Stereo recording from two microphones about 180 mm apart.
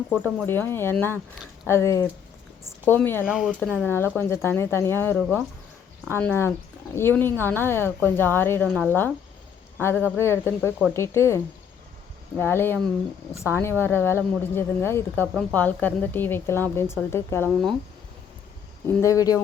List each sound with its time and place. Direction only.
0.4 s speech: 10° left (ahead or behind)
3.2 s speech: 5° right (ahead or behind)
3.6 s speech: 10° left (ahead or behind)
12.4 s speech: 10° left (ahead or behind)
18.9 s speech: 15° left (ahead or behind)